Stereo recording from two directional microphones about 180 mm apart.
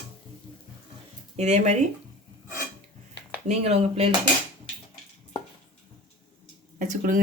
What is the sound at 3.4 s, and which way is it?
Speech, 35° right (ahead or behind).